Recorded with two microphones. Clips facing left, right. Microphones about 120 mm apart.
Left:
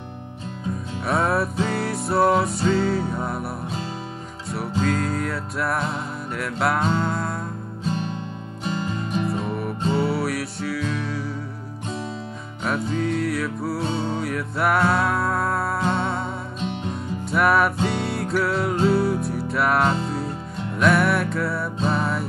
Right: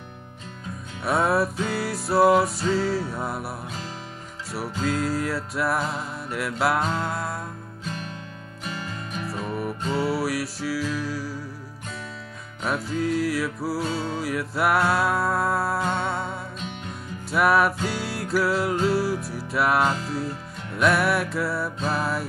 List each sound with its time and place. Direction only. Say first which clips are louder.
1.0 s music: even; centre (ahead or behind)
7.9 s music: left 8 dB; 30° left (ahead or behind)
9.3 s music: left 3 dB; centre (ahead or behind)
12.6 s music: left 2 dB; centre (ahead or behind)